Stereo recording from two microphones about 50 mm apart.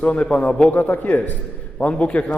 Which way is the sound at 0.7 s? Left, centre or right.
Left.